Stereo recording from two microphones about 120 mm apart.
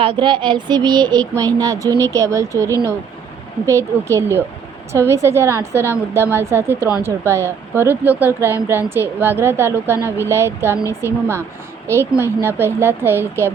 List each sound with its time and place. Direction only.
0.0 s child singing: 45° right (ahead or behind); by 2.6 s 25° right (ahead or behind)
3.7 s speech: 25° right (ahead or behind)